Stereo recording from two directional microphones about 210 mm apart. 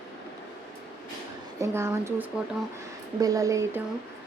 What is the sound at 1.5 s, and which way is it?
A woman's voice, 15° right (ahead or behind).